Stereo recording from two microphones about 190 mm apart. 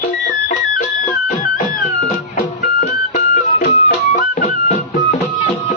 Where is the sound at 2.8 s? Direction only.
40° left (ahead or behind).